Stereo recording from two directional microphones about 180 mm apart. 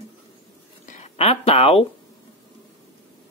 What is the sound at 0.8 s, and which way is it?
Speech, 40° left (ahead or behind).